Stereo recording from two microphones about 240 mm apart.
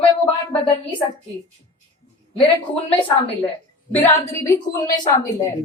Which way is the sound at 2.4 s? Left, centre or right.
Left.